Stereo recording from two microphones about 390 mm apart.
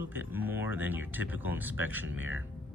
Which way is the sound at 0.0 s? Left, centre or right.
Centre.